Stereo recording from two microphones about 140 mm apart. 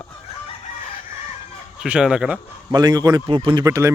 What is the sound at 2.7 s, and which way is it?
Speech, 30° right (ahead or behind).